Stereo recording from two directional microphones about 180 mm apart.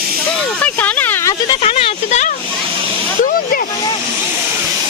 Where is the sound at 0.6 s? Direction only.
10° left (ahead or behind).